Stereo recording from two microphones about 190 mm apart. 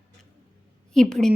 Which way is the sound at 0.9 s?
Centre (ahead or behind).